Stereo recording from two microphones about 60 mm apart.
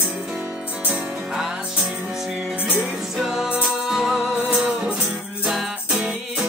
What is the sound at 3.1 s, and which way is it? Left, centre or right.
Music, centre.